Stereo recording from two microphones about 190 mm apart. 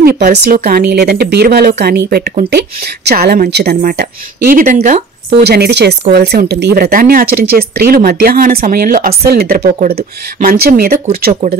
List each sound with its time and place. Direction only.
0.0 s speech: 55° right (ahead or behind)
5.3 s speech: 60° right (ahead or behind)